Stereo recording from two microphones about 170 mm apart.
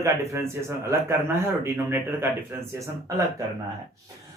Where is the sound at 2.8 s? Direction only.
20° right (ahead or behind).